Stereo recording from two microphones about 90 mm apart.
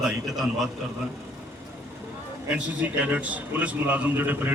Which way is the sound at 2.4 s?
15° right (ahead or behind).